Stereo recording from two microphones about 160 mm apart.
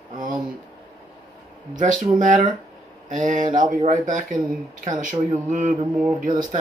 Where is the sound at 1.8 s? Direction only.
55° right (ahead or behind).